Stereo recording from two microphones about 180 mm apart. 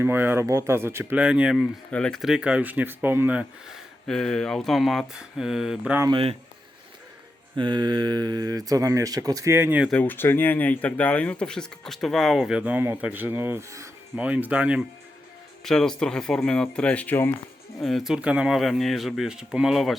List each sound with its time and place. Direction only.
0.0 s speech: 10° right (ahead or behind)
4.0 s speech: 5° left (ahead or behind)
6.0 s speech: 25° right (ahead or behind)
7.5 s speech: 25° right (ahead or behind); by 9.9 s 10° right (ahead or behind)
9.9 s speech: 10° left (ahead or behind)